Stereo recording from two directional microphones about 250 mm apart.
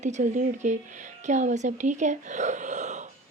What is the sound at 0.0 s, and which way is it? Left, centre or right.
Speech, right.